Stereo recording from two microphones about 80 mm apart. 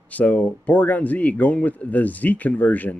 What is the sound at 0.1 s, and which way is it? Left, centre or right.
Speech, centre.